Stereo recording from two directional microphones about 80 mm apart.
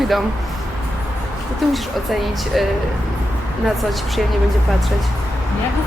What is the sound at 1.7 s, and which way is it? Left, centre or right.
Speech, centre.